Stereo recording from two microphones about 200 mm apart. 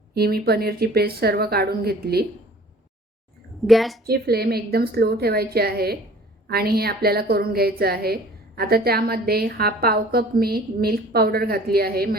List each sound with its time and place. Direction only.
0.1 s a woman's voice: 50° right (ahead or behind)
3.6 s a woman's voice: centre (ahead or behind)
4.0 s a woman's voice: 50° right (ahead or behind)